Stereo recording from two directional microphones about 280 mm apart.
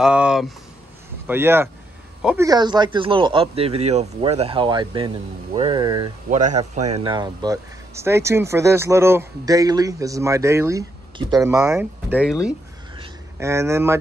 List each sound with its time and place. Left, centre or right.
0.0 s speech: centre
6.3 s speech: right; by 12.5 s centre
12.9 s a sound: centre